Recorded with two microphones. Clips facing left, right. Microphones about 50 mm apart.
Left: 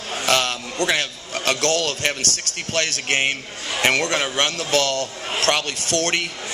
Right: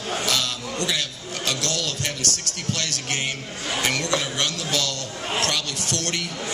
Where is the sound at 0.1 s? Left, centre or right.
Left.